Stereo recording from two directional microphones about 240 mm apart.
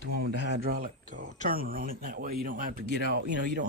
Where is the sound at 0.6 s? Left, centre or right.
Right.